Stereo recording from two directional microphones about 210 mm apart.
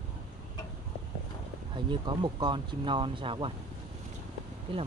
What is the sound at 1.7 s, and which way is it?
Speech, 20° right (ahead or behind).